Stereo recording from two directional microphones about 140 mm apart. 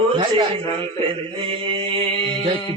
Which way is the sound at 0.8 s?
40° right (ahead or behind).